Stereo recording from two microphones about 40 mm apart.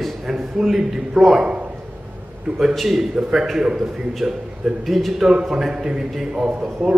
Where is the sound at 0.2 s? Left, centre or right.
Centre.